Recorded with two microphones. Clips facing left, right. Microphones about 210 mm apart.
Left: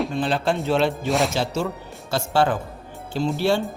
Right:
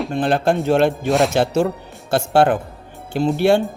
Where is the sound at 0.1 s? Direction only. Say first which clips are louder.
Right 5 dB; 55° right (ahead or behind).